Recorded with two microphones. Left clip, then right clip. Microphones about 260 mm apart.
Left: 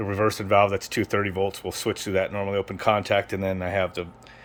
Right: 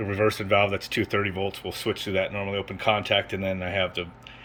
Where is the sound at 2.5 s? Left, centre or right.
Left.